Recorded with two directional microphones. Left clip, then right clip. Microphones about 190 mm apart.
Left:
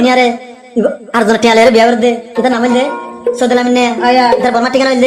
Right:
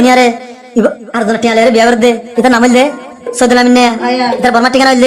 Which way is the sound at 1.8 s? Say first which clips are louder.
Right 2 dB; 15° right (ahead or behind).